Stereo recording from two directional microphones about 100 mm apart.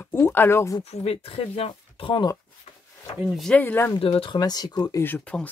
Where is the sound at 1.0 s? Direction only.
75° left (ahead or behind).